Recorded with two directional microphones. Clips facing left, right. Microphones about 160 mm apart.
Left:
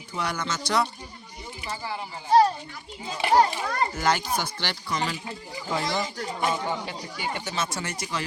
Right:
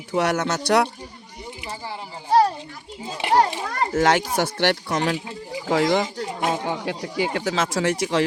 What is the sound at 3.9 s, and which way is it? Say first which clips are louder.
Speech: right 11 dB; 90° right.